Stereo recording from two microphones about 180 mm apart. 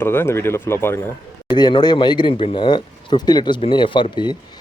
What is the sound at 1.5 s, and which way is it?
Speech, 25° left (ahead or behind).